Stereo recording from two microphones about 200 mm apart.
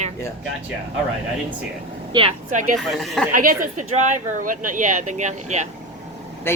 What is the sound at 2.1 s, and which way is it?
Speech, 25° right (ahead or behind).